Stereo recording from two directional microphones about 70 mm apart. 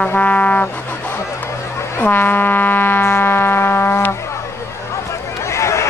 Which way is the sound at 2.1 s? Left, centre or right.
Left.